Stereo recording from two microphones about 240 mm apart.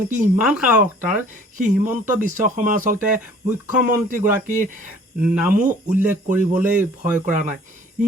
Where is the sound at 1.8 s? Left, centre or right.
Centre.